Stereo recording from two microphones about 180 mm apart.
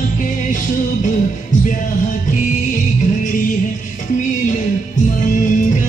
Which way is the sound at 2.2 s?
45° left (ahead or behind).